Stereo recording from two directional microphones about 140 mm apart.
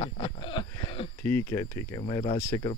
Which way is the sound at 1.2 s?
15° left (ahead or behind).